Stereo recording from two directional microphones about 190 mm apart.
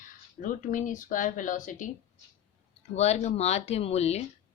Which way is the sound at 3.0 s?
35° left (ahead or behind).